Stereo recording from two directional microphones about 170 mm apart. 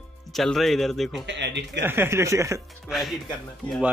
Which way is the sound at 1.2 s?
90° right.